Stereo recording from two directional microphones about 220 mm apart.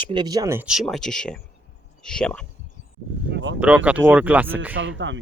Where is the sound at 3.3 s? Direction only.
55° right (ahead or behind).